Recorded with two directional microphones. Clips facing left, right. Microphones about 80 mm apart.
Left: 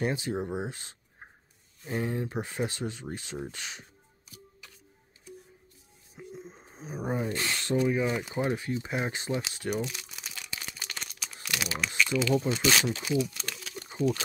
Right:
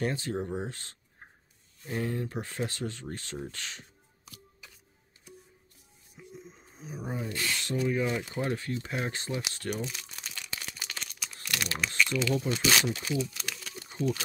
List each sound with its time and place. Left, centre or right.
0.0 s speech: centre
6.1 s a sound: left
7.2 s speech: left
7.9 s speech: centre
9.5 s crumpling: centre
11.4 s typing: centre
12.0 s speech: centre
13.4 s a sound: centre